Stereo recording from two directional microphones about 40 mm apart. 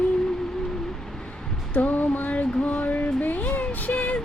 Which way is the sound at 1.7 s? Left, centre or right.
Left.